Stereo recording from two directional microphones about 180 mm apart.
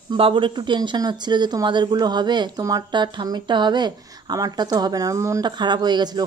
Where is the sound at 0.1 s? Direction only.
30° right (ahead or behind).